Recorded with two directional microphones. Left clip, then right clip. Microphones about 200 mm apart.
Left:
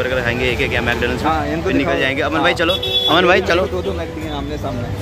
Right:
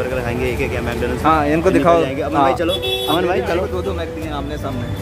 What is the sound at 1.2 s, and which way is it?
Speech, 55° right (ahead or behind).